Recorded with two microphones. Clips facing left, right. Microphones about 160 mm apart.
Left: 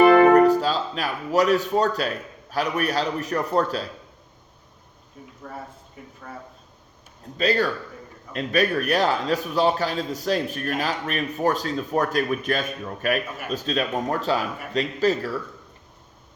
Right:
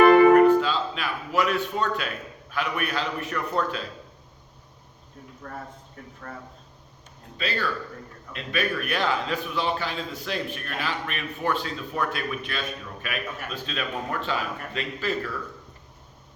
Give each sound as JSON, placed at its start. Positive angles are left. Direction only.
{"t": 0.3, "sound": "speech", "side_deg": 40}
{"t": 5.4, "sound": "speech", "side_deg": 10}
{"t": 7.3, "sound": "a man's voice", "side_deg": 40}